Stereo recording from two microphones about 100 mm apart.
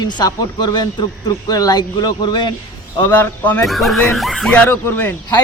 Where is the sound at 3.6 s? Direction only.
Centre (ahead or behind).